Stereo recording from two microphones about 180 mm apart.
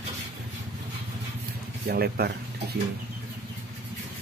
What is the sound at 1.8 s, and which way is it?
Speech, 60° right (ahead or behind).